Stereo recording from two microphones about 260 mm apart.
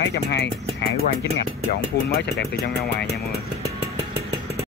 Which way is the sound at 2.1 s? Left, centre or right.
Left.